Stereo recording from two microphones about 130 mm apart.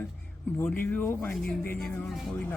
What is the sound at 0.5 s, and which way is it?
Speech, 15° left (ahead or behind).